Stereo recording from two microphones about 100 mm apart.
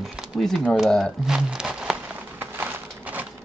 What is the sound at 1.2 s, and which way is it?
Crumpling, 5° right (ahead or behind).